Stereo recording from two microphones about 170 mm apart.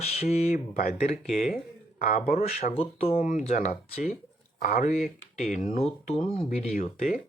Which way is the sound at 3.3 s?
45° left (ahead or behind).